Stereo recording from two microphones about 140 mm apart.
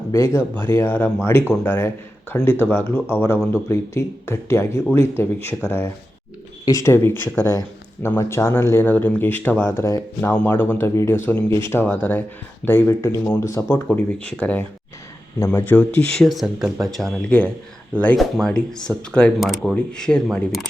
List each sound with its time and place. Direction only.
0.1 s speech: 20° left (ahead or behind); by 20.7 s centre (ahead or behind)